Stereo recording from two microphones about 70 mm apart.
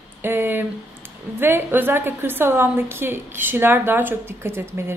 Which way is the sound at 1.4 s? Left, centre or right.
Right.